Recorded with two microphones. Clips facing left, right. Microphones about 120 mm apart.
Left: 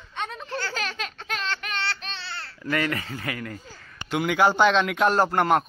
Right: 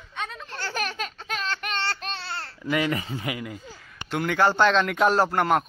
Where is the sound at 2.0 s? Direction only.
45° right (ahead or behind).